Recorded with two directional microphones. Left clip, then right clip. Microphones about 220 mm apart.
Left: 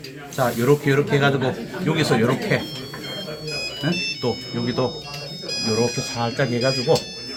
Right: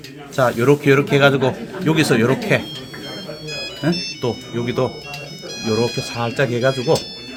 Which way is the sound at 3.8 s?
50° right (ahead or behind).